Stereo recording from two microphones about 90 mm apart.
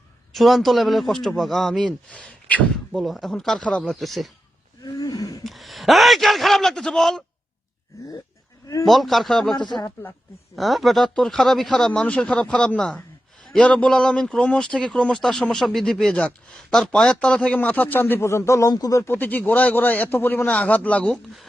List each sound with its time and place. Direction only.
0.3 s speech: centre (ahead or behind)
4.8 s wild animals: 45° left (ahead or behind)
5.4 s speech: centre (ahead or behind)
8.8 s speech: centre (ahead or behind)
9.6 s speech: 55° left (ahead or behind)
9.8 s a man's voice: 25° left (ahead or behind)
10.5 s a man's voice: centre (ahead or behind); by 19.0 s 40° left (ahead or behind)
19.0 s a man's voice: 20° left (ahead or behind)